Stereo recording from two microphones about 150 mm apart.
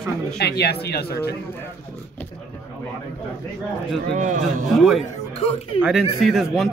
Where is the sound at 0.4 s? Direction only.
90° left.